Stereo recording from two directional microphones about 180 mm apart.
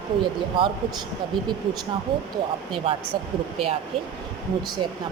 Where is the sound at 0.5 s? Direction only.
30° right (ahead or behind).